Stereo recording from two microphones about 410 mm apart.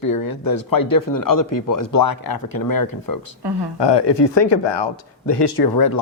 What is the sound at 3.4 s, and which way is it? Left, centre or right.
Speech, right.